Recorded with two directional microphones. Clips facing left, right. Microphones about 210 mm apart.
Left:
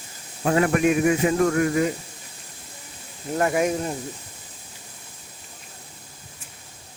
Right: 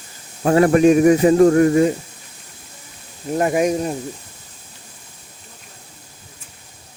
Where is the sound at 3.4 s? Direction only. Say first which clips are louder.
Right 4 dB; 20° right (ahead or behind).